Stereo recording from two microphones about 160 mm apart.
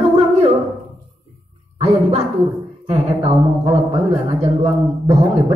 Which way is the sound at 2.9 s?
40° right (ahead or behind).